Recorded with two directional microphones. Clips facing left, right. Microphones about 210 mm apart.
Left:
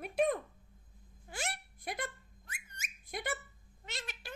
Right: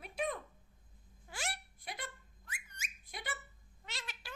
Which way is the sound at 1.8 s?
50° left (ahead or behind).